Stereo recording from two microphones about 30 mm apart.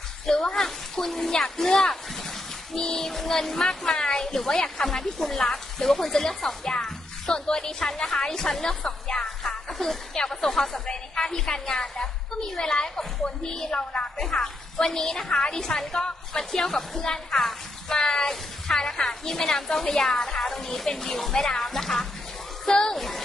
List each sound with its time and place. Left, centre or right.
0.3 s a woman's voice: left
0.9 s a woman's voice: centre
4.8 s a woman's voice: centre
9.4 s music: centre
10.1 s a woman's voice: left
14.1 s a woman's voice: centre
17.8 s speech: left
18.1 s a woman's voice: centre
22.7 s a woman's voice: left
22.9 s speech: centre